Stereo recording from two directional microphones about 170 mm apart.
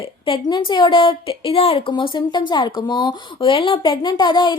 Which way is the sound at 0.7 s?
30° left (ahead or behind).